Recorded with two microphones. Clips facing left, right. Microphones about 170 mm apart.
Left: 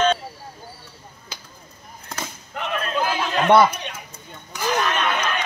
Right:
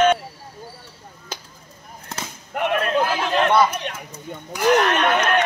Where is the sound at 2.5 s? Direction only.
60° right (ahead or behind).